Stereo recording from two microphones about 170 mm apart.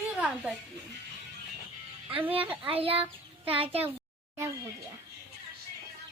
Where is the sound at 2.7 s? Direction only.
35° right (ahead or behind).